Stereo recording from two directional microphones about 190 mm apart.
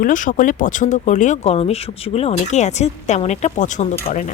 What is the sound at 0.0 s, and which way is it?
Speech, 45° left (ahead or behind).